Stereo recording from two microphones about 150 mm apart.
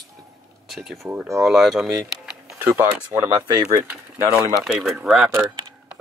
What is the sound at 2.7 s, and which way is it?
Speech, 15° right (ahead or behind).